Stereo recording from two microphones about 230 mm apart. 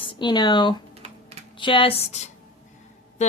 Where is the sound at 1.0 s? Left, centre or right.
Right.